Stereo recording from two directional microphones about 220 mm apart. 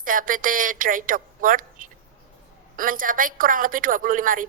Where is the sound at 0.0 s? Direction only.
40° right (ahead or behind).